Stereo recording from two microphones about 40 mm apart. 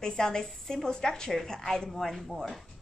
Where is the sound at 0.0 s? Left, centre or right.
Centre.